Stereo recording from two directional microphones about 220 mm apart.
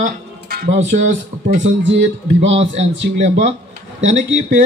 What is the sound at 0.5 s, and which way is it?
Music, 45° right (ahead or behind).